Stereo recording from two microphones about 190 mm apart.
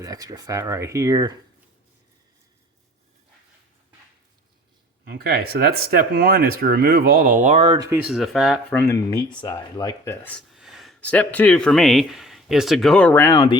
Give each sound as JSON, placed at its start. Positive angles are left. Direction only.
{"t": 0.0, "sound": "speech", "side_deg": -20}
{"t": 5.0, "sound": "speech", "side_deg": -55}
{"t": 7.9, "sound": "speech", "side_deg": -5}
{"t": 8.7, "sound": "speech", "side_deg": 15}